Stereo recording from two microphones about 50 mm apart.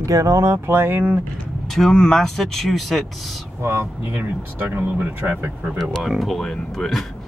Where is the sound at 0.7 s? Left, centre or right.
Right.